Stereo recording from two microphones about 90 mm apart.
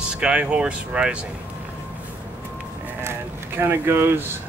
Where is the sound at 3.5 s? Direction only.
25° right (ahead or behind).